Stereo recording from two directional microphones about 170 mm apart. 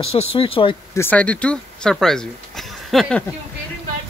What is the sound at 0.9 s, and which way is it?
Speech, 10° left (ahead or behind).